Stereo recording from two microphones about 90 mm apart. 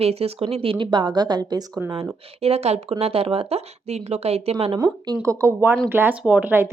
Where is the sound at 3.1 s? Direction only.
90° right.